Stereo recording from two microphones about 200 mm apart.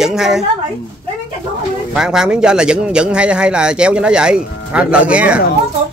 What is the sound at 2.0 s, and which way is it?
A man's voice, 5° right (ahead or behind).